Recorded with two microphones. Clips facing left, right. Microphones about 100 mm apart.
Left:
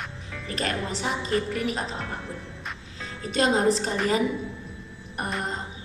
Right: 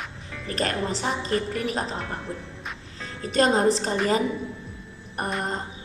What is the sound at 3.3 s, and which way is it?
Speech, 40° right (ahead or behind).